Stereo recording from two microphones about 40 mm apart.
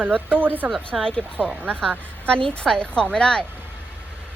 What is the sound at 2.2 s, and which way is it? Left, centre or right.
A woman's voice, left.